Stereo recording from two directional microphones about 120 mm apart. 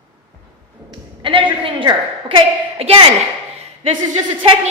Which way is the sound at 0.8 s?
45° right (ahead or behind).